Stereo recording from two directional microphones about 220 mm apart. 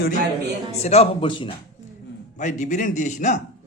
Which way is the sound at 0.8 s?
30° left (ahead or behind).